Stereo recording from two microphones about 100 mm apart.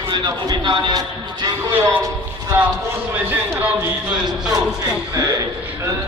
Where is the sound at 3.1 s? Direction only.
20° right (ahead or behind).